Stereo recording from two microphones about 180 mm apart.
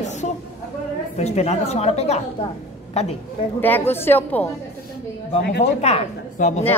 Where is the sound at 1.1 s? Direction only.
35° left (ahead or behind).